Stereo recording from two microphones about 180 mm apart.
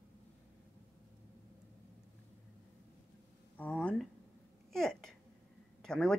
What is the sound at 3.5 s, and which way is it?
A woman's voice, 10° left (ahead or behind).